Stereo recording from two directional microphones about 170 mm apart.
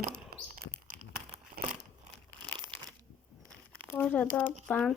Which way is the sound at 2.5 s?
30° right (ahead or behind).